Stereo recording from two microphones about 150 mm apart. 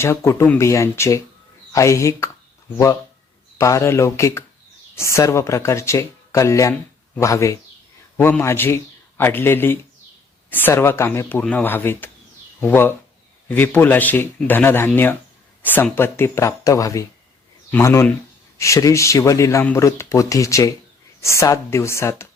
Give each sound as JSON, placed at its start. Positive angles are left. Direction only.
{"t": 0.0, "sound": "a man's voice", "side_deg": 20}